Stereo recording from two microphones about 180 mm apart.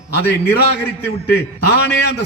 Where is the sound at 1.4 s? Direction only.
65° left (ahead or behind).